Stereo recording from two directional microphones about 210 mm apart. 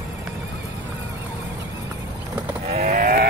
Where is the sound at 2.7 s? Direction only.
35° right (ahead or behind).